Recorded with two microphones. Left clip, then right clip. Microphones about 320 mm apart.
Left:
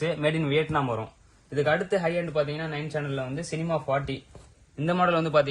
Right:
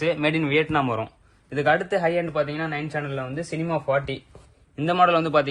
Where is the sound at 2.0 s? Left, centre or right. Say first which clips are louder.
Right 4 dB; centre.